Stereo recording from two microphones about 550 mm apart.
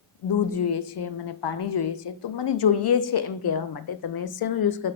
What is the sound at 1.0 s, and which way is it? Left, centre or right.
A woman's voice, left.